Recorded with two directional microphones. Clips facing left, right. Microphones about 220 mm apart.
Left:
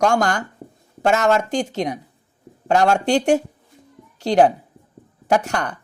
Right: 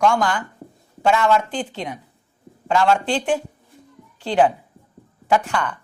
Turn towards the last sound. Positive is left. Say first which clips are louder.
# left 1 dB
turn(degrees=40)  # may be behind; listen again after turning